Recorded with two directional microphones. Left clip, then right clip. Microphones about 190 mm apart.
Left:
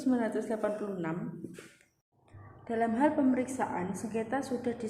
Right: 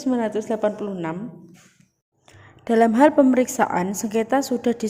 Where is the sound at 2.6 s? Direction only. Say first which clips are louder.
Right 13 dB; 55° right (ahead or behind).